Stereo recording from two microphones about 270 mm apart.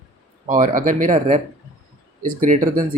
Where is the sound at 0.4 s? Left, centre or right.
Right.